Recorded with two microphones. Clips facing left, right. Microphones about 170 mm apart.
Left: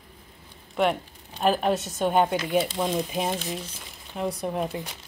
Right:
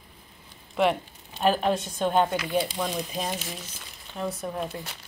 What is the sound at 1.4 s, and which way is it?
A woman's voice, 5° left (ahead or behind).